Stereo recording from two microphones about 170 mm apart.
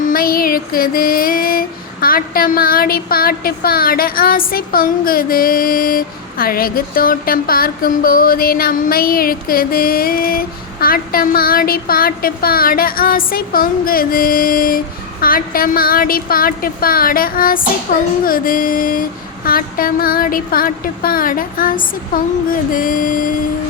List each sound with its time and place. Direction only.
0.0 s female singing: 60° left (ahead or behind)